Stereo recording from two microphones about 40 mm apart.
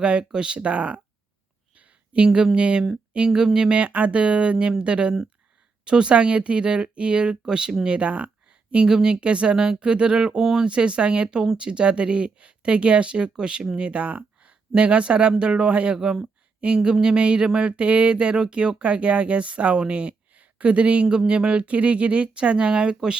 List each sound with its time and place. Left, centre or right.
0.0 s speech: right
1.7 s a sound: right
2.6 s speech: right
3.8 s speech: right
16.6 s a sound: right
16.9 s speech: right